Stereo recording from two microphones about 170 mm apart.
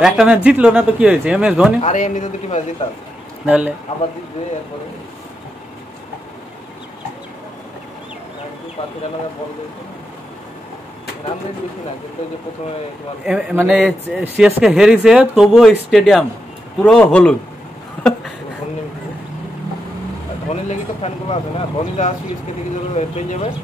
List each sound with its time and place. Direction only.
0.0 s speech: 5° right (ahead or behind)
1.8 s speech: 45° left (ahead or behind)
3.4 s speech: 10° right (ahead or behind)
13.2 s speech: 5° right (ahead or behind)
18.0 s a sound: 5° left (ahead or behind)
20.6 s speech: 40° left (ahead or behind)